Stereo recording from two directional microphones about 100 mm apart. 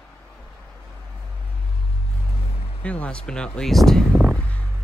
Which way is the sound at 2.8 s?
15° left (ahead or behind).